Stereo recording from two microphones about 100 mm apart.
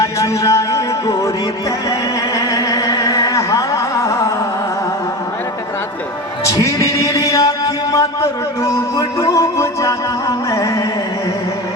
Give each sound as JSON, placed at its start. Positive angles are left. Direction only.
{"t": 0.0, "sound": "a sound", "side_deg": 35}
{"t": 2.3, "sound": "music", "side_deg": 35}
{"t": 6.4, "sound": "chant", "side_deg": 35}